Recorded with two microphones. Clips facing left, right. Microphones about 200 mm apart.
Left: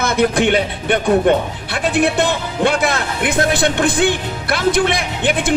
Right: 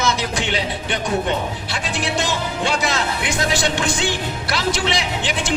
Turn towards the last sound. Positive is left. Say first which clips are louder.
# left 5 dB
turn(degrees=55)  # may be behind; listen again after turning